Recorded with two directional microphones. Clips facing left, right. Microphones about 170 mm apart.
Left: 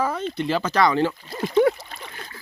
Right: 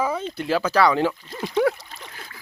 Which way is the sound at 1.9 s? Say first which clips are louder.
Left 2 dB; 60° left (ahead or behind).